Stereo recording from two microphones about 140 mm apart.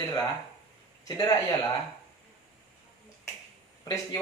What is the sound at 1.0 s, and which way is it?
Speech, 30° left (ahead or behind).